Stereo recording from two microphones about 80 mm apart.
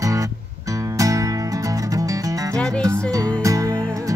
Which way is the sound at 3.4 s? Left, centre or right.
Right.